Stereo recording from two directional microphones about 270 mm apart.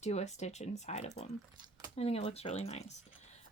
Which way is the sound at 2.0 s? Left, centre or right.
Left.